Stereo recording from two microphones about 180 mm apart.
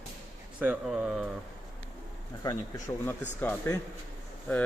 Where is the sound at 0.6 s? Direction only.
10° right (ahead or behind).